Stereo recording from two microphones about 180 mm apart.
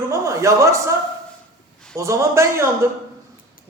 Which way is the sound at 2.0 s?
15° right (ahead or behind).